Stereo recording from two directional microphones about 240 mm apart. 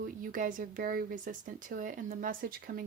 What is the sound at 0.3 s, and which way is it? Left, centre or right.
Speech, right.